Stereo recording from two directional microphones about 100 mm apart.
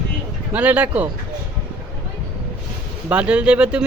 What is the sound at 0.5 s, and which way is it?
Speech, 15° right (ahead or behind).